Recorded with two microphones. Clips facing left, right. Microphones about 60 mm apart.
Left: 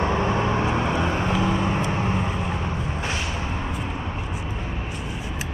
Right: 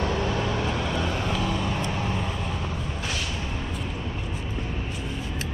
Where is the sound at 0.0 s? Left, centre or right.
Left.